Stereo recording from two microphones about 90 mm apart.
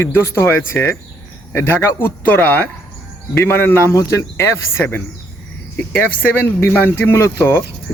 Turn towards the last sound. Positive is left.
turn(degrees=25)  # may be behind; listen again after turning